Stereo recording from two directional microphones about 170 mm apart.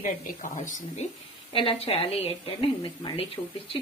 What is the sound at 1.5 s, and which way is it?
A woman's voice, 30° left (ahead or behind).